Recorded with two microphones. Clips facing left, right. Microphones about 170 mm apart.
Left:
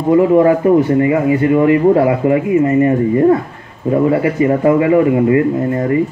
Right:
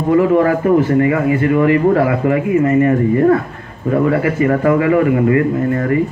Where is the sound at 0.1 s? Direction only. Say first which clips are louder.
Left 3 dB; 20° left (ahead or behind).